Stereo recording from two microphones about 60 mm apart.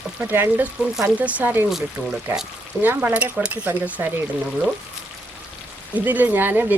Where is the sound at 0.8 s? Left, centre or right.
Centre.